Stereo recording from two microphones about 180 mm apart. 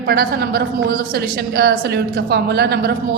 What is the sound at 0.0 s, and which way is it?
A woman's voice, 60° right (ahead or behind).